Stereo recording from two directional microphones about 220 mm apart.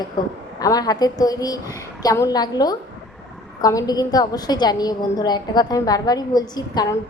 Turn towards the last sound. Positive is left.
turn(degrees=15)  # may be behind; listen again after turning